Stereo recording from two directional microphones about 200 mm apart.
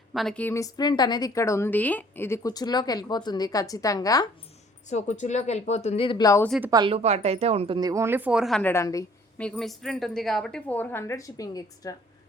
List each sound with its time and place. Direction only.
0.1 s a woman's voice: centre (ahead or behind); by 4.3 s 20° left (ahead or behind)
4.9 s speech: 35° left (ahead or behind); by 6.5 s 15° left (ahead or behind)
6.7 s speech: 20° right (ahead or behind)
7.8 s a woman's voice: 15° right (ahead or behind); by 9.0 s 15° left (ahead or behind)
9.4 s a woman's voice: centre (ahead or behind); by 11.9 s 15° left (ahead or behind)